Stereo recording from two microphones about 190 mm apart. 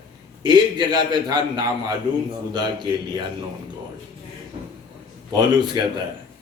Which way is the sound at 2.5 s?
25° right (ahead or behind).